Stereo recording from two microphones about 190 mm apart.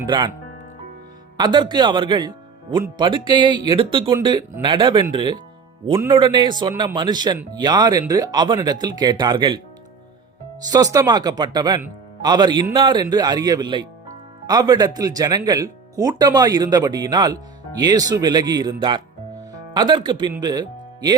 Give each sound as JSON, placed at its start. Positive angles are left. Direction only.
{"t": 1.4, "sound": "speech", "side_deg": -25}
{"t": 10.7, "sound": "speech", "side_deg": -20}